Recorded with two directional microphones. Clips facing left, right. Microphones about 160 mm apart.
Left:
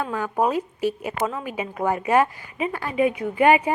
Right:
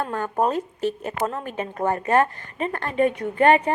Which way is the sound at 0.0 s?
5° left (ahead or behind).